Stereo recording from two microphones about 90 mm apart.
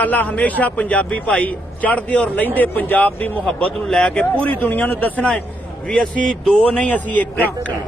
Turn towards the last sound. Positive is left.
turn(degrees=15)  # may be behind; listen again after turning